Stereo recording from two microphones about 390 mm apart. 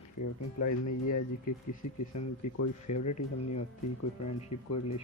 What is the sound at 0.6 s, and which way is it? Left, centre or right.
Speech, left.